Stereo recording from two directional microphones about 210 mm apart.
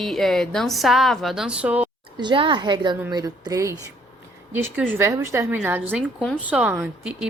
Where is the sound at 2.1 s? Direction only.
20° right (ahead or behind).